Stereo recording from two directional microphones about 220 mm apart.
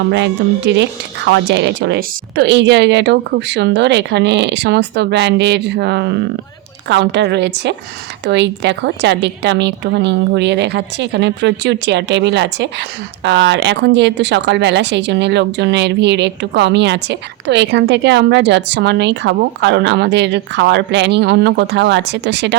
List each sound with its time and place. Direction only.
0.1 s speech: 50° right (ahead or behind)